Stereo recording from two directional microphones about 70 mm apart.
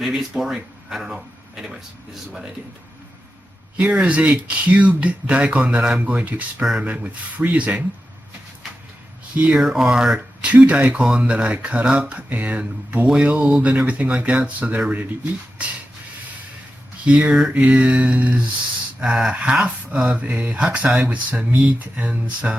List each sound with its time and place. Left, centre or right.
0.0 s speech: centre
3.8 s speech: centre
6.6 s speech: centre
6.8 s speech: centre
9.6 s speech: centre
10.4 s speech: centre
17.1 s speech: centre
18.9 s speech: centre